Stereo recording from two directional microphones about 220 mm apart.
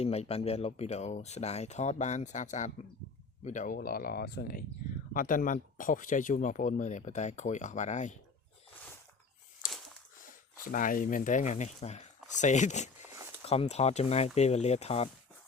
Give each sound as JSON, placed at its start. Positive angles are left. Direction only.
{"t": 0.0, "sound": "speech", "side_deg": 30}
{"t": 9.6, "sound": "a sound", "side_deg": 0}
{"t": 10.6, "sound": "speech", "side_deg": 35}